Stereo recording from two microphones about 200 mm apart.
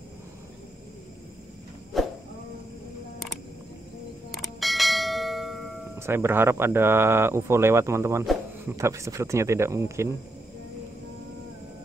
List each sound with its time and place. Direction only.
1.9 s a sound: centre (ahead or behind)
4.3 s bell: centre (ahead or behind)
5.9 s speech: 10° right (ahead or behind)